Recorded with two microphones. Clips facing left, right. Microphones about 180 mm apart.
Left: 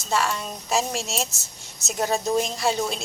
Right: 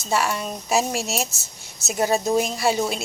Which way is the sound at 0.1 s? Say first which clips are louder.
Right 2 dB; 10° right (ahead or behind).